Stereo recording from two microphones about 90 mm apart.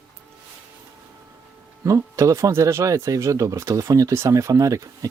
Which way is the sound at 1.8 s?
35° right (ahead or behind).